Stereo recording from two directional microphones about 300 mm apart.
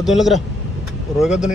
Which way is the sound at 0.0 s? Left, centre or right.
Centre.